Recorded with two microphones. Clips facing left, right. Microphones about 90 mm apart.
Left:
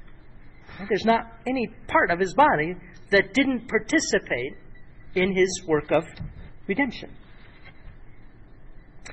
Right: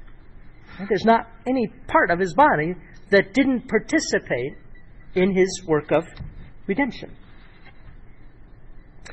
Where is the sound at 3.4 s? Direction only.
10° right (ahead or behind).